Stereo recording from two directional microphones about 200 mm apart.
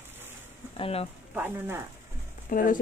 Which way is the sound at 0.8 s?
30° left (ahead or behind).